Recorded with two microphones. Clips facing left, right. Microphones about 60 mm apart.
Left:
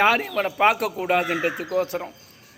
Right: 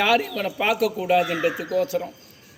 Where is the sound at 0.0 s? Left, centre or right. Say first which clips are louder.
Left 1 dB; left.